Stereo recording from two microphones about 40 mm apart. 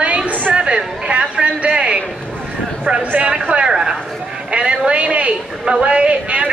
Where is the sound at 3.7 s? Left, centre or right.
Centre.